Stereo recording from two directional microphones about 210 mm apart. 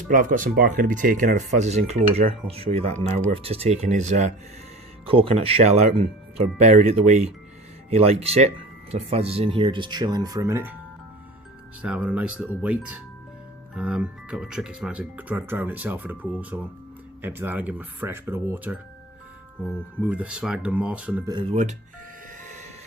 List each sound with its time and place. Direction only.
0.1 s speech: 40° right (ahead or behind); by 10.8 s 10° right (ahead or behind)
11.8 s speech: 5° right (ahead or behind)
21.3 s speech: 30° right (ahead or behind)